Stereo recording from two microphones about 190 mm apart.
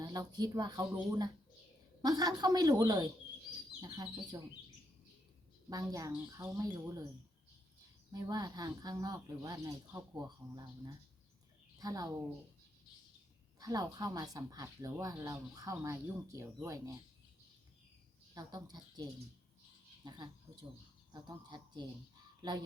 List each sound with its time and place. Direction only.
0.0 s speech: 20° right (ahead or behind)
5.6 s speech: 20° right (ahead or behind)
8.1 s speech: 20° right (ahead or behind)
13.6 s speech: 20° right (ahead or behind)
18.3 s speech: 20° right (ahead or behind)
20.1 s speech: 20° right (ahead or behind)